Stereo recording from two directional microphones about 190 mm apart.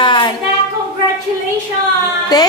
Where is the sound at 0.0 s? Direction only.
25° left (ahead or behind).